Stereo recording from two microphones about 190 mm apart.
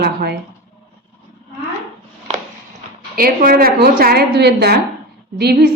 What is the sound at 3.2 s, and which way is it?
A woman's voice, 50° right (ahead or behind).